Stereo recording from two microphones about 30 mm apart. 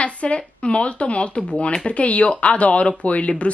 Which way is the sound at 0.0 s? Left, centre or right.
Left.